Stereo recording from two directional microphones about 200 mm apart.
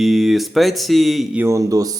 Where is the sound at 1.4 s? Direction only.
15° right (ahead or behind).